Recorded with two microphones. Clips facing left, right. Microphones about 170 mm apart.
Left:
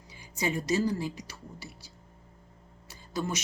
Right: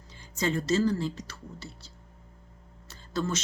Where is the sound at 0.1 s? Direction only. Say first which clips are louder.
Right 2 dB; 10° left (ahead or behind).